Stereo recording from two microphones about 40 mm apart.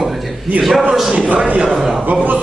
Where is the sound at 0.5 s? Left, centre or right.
Right.